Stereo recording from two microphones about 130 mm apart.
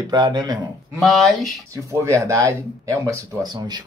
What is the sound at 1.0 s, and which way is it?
Speech, centre (ahead or behind).